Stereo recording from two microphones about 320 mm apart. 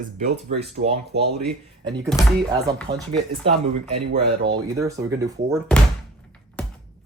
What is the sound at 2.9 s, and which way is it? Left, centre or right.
Speech, right.